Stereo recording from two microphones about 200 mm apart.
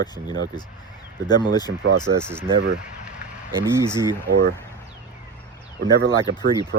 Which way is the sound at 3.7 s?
15° right (ahead or behind).